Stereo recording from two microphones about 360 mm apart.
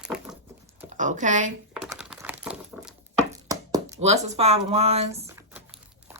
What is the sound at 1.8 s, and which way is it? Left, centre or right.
Typing, centre.